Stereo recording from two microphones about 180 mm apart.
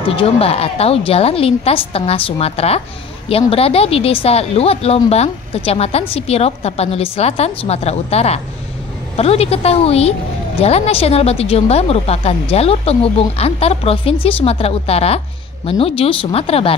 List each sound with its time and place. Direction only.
0.1 s speech: 30° left (ahead or behind)